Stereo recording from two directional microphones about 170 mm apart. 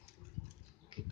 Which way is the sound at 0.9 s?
30° right (ahead or behind).